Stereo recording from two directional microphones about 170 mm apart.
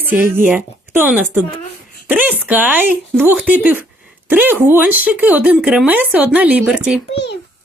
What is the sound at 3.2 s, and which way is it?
Speech, 10° right (ahead or behind).